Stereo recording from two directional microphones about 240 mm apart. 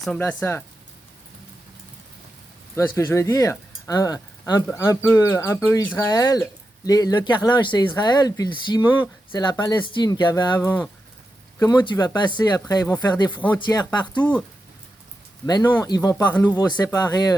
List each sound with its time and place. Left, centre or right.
0.0 s speech: centre
2.7 s speech: centre
14.2 s speech: centre
15.4 s speech: centre